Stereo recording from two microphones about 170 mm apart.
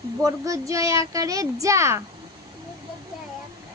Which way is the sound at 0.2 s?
20° right (ahead or behind).